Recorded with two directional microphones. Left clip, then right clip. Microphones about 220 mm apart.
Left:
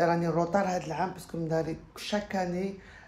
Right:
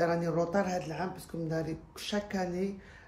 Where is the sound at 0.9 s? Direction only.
5° right (ahead or behind).